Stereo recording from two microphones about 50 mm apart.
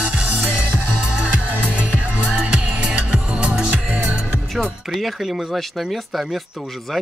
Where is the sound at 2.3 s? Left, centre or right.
Right.